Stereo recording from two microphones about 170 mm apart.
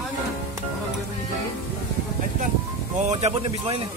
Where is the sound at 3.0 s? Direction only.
40° right (ahead or behind).